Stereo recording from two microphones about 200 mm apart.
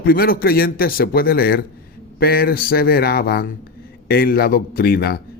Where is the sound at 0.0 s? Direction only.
50° left (ahead or behind).